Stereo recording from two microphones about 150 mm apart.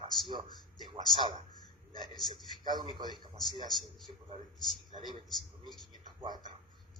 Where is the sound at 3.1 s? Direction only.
25° left (ahead or behind).